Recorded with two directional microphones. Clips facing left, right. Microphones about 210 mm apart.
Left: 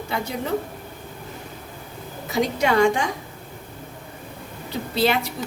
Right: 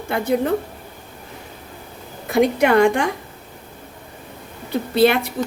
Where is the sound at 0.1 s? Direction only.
55° right (ahead or behind).